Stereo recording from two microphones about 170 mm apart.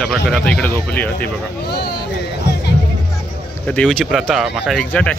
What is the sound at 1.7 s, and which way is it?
Speech, 70° left (ahead or behind).